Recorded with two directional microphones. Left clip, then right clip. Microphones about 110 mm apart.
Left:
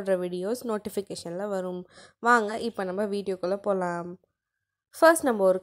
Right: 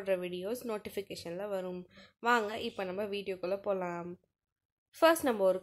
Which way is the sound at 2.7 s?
50° left (ahead or behind).